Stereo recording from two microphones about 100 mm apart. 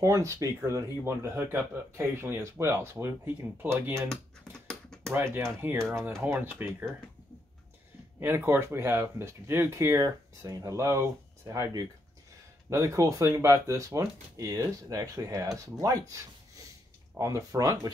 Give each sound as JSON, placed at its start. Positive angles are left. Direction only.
{"t": 0.0, "sound": "speech", "side_deg": -30}
{"t": 4.1, "sound": "computer keyboard", "side_deg": 5}
{"t": 5.1, "sound": "speech", "side_deg": -25}
{"t": 8.2, "sound": "speech", "side_deg": -25}
{"t": 17.2, "sound": "speech", "side_deg": -35}